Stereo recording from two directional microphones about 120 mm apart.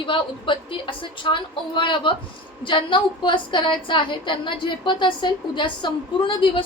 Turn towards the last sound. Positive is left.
turn(degrees=45)  # may be behind; listen again after turning